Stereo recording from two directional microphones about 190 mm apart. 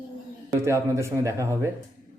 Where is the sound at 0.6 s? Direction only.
15° right (ahead or behind).